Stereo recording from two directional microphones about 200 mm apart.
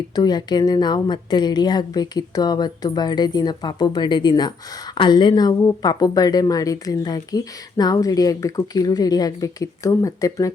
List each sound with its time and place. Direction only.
0.2 s speech: 20° left (ahead or behind)